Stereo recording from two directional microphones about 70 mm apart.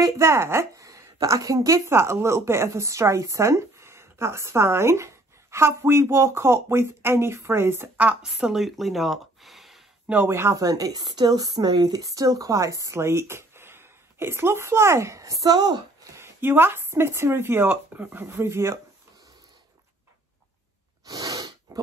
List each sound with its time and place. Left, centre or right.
0.2 s a woman's voice: right
8.2 s speech: centre
10.2 s a woman's voice: right
10.6 s speech: right
16.2 s a woman's voice: right
21.0 s sneeze: right